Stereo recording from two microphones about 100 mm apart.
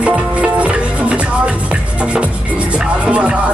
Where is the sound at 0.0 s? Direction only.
10° right (ahead or behind).